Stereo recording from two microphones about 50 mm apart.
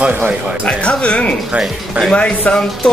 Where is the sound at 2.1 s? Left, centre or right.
Left.